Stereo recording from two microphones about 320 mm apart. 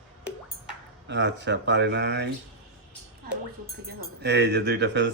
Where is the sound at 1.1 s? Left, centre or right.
Right.